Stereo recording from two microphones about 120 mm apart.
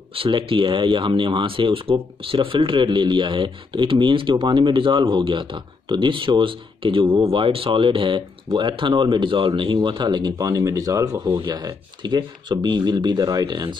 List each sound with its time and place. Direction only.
0.1 s speech: 50° right (ahead or behind)